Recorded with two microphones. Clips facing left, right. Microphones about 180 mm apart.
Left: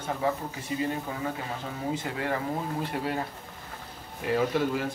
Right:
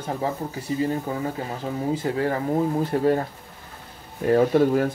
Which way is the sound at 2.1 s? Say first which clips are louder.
Right 7 dB; 35° right (ahead or behind).